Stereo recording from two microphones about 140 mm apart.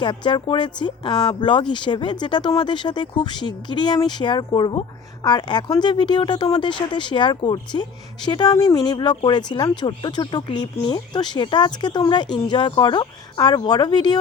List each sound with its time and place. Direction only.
0.0 s speech: 35° left (ahead or behind)